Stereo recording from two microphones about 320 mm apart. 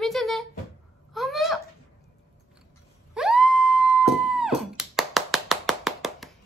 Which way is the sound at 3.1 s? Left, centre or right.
Centre.